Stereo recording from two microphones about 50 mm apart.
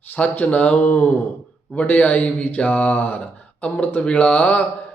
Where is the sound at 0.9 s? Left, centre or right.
Left.